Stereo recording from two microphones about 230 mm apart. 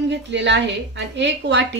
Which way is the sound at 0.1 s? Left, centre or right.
Right.